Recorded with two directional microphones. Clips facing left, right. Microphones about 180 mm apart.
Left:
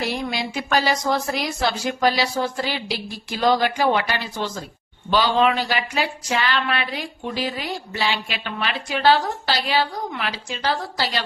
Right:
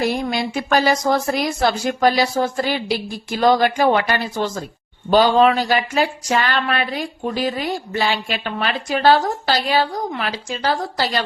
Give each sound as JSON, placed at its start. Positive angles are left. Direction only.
{"t": 0.0, "sound": "speech", "side_deg": -45}